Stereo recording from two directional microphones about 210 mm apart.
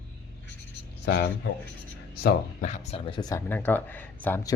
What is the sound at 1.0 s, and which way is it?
Speech, 50° left (ahead or behind).